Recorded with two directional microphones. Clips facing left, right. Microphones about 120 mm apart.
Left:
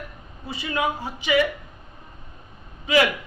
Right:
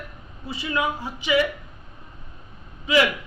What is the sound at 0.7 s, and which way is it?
Speech, 40° left (ahead or behind).